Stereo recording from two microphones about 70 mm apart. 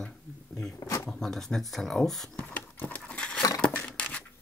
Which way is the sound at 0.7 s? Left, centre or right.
Left.